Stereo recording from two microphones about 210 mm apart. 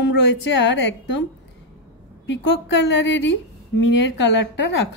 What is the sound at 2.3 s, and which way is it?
A woman's voice, 55° left (ahead or behind).